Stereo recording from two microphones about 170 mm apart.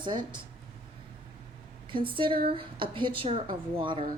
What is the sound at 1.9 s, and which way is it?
Speech, 30° right (ahead or behind).